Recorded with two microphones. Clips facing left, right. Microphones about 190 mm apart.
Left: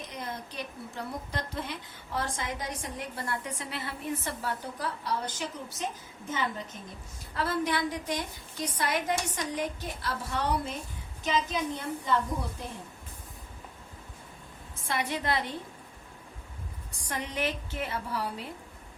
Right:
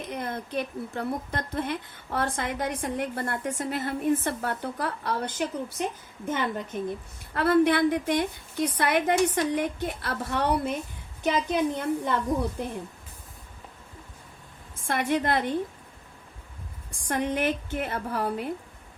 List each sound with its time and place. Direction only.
0.0 s a woman's voice: 55° right (ahead or behind)
14.8 s a woman's voice: 50° right (ahead or behind)
17.1 s a woman's voice: 55° right (ahead or behind)